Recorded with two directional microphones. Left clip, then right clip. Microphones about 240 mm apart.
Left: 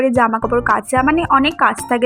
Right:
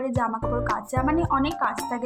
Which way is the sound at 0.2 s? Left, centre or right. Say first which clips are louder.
Left 11 dB; left.